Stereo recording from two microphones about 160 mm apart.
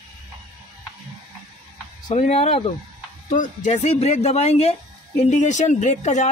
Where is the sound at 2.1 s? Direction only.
40° left (ahead or behind).